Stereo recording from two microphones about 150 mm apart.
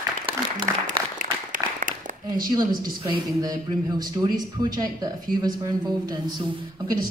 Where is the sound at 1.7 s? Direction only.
65° right (ahead or behind).